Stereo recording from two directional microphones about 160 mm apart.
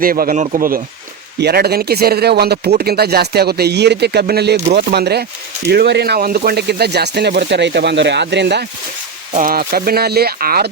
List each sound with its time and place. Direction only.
0.0 s speech: 65° right (ahead or behind)
1.4 s speech: 85° right
9.3 s speech: 60° right (ahead or behind); by 10.7 s 75° right (ahead or behind)